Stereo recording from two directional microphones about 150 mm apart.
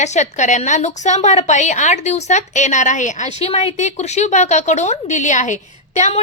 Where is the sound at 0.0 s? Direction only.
50° left (ahead or behind).